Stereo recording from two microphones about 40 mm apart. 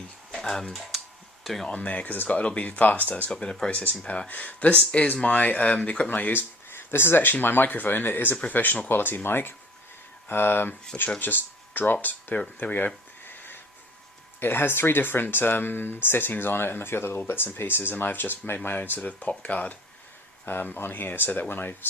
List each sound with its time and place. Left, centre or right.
0.3 s speech: centre
0.7 s typing: centre
1.6 s speech: left
2.0 s speech: left
3.4 s speech: left
3.7 s speech: left
4.3 s speech: left
6.1 s speech: left
6.7 s speech: left
7.4 s speech: left
12.5 s a sound: left
14.3 s speech: left
18.9 s speech: left
20.4 s speech: left